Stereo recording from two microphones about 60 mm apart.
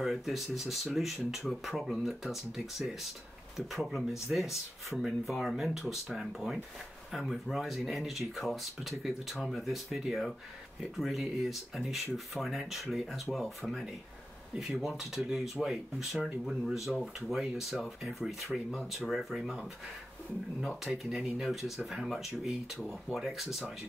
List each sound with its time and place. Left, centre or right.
0.0 s speech: centre
14.5 s speech: centre
20.6 s speech: centre